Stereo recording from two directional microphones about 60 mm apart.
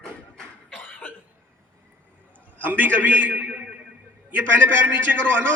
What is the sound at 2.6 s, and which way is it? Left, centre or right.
A man's voice, right.